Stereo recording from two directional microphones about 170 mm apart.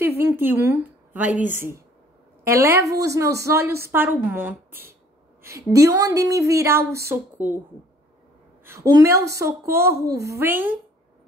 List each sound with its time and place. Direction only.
0.0 s a woman's voice: 15° right (ahead or behind)
8.6 s a woman's voice: 20° right (ahead or behind)